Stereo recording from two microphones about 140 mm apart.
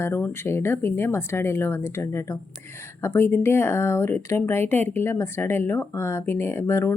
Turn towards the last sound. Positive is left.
turn(degrees=20)  # may be behind; listen again after turning